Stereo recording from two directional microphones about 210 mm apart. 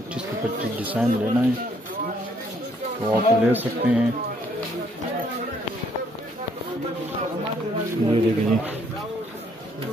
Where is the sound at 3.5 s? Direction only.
10° right (ahead or behind).